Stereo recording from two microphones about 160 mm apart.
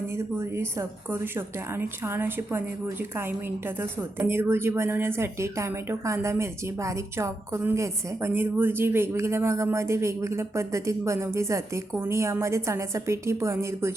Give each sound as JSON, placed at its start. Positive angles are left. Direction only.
{"t": 0.3, "sound": "a woman's voice", "side_deg": -15}